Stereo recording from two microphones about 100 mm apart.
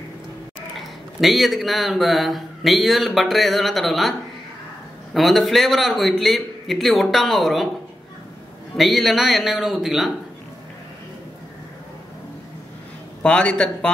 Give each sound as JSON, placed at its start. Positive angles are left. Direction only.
{"t": 0.7, "sound": "a man's voice", "side_deg": 0}
{"t": 5.1, "sound": "a man's voice", "side_deg": 0}
{"t": 8.7, "sound": "a man's voice", "side_deg": 0}
{"t": 13.2, "sound": "a man's voice", "side_deg": 10}